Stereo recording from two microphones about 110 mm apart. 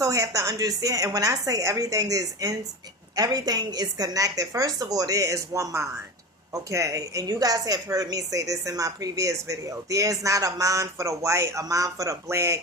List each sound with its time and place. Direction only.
0.0 s a woman's voice: 30° right (ahead or behind)